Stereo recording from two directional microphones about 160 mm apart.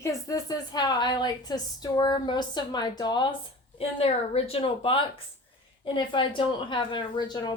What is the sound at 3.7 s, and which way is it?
A woman's voice, 40° left (ahead or behind).